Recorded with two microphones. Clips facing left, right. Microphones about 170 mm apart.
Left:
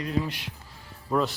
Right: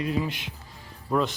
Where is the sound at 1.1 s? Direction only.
Centre (ahead or behind).